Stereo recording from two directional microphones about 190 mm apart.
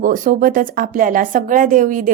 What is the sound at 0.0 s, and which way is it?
Speech, 45° right (ahead or behind).